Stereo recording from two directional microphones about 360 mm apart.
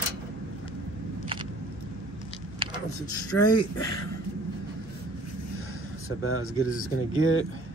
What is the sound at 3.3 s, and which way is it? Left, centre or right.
Speech, left.